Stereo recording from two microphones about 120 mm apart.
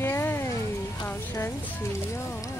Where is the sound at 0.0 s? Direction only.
20° left (ahead or behind).